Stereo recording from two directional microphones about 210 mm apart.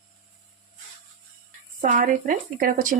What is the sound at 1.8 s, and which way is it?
Speech, 40° right (ahead or behind).